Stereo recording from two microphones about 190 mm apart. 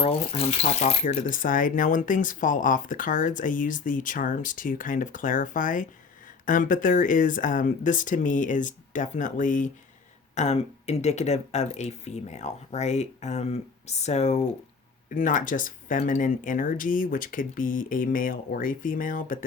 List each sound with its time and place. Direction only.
0.0 s speech: 30° left (ahead or behind)